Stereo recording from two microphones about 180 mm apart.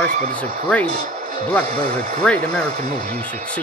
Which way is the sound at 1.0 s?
60° right (ahead or behind).